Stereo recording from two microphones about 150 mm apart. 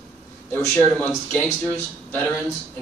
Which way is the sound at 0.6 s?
15° left (ahead or behind).